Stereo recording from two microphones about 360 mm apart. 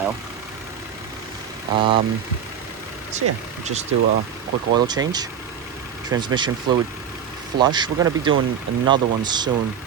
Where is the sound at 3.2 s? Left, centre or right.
Right.